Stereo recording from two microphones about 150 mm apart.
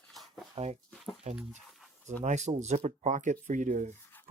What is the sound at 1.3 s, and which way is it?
Speech, 50° right (ahead or behind).